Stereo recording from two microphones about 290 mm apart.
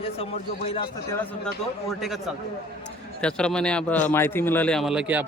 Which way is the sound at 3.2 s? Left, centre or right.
Centre.